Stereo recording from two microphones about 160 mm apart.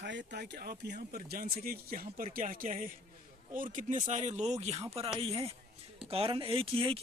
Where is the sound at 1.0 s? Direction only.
65° right (ahead or behind).